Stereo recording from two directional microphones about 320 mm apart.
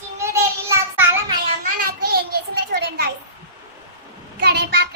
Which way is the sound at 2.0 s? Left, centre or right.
Right.